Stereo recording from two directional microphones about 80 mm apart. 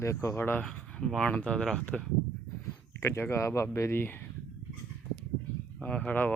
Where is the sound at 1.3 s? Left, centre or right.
Centre.